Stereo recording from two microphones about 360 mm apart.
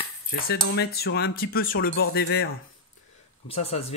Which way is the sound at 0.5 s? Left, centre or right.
Left.